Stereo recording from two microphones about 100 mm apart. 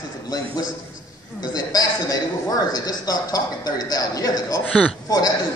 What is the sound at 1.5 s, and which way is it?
A man's voice, 35° left (ahead or behind).